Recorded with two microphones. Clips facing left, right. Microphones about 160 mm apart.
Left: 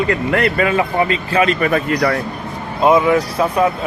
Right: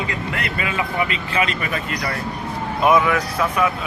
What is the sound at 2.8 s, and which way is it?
Speech, 25° left (ahead or behind).